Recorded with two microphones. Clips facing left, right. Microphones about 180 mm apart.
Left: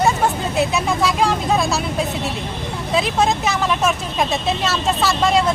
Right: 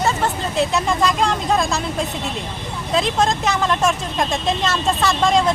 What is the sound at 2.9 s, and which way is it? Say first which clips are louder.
Speech: even; 5° left (ahead or behind).